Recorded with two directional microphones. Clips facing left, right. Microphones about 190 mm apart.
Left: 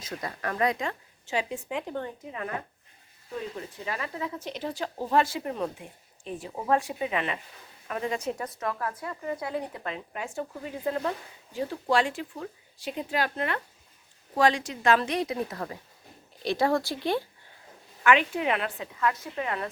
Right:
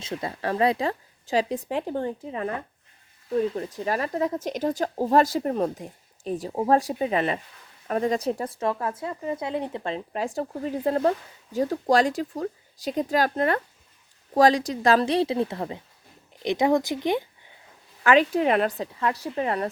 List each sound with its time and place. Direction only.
0.0 s speech: 25° right (ahead or behind)
3.5 s speech: 40° right (ahead or behind); by 17.2 s 20° right (ahead or behind)
18.0 s speech: 35° right (ahead or behind)